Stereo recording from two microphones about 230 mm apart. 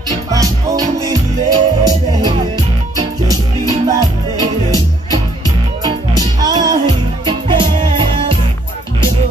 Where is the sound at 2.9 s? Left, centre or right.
Centre.